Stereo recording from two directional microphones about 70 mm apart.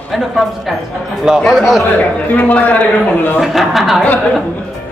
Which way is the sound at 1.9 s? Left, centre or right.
Left.